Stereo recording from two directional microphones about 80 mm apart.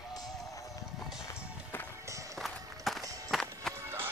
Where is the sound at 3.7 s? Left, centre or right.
Right.